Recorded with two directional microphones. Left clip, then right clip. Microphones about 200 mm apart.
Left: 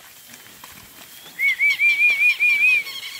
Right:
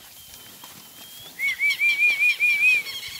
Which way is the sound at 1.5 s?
55° right (ahead or behind).